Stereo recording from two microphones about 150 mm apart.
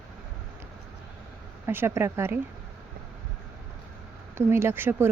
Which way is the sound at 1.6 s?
15° right (ahead or behind).